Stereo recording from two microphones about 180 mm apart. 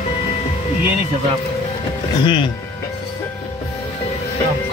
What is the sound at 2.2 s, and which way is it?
Speech, 25° left (ahead or behind).